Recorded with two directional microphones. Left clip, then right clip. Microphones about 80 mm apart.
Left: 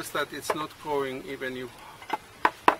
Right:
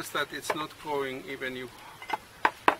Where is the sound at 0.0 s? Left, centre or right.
Centre.